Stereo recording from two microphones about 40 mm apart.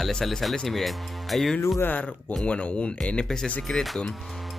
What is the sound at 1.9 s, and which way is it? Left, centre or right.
Speech, left.